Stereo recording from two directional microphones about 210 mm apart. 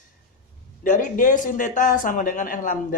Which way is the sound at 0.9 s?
40° left (ahead or behind).